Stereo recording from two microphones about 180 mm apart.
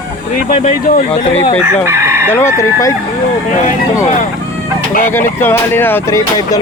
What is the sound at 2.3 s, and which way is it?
Speech, 15° left (ahead or behind).